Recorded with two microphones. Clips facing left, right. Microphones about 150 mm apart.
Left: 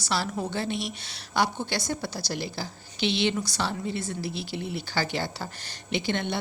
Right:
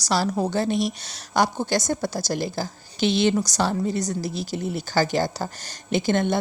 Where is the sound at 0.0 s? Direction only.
40° right (ahead or behind).